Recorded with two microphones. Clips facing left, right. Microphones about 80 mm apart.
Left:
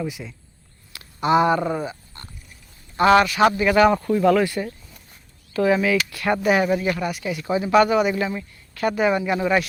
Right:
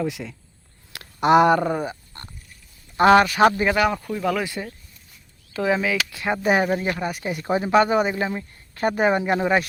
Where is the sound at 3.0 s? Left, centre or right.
Right.